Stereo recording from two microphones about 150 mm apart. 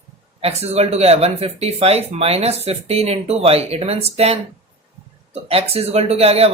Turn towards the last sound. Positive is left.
turn(degrees=-45)  # may be behind; listen again after turning